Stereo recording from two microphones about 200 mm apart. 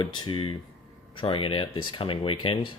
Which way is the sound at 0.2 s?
25° left (ahead or behind).